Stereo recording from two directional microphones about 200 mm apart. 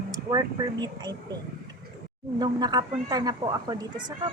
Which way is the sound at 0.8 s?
20° right (ahead or behind).